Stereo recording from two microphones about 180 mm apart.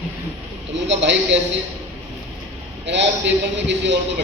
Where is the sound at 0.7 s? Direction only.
80° right.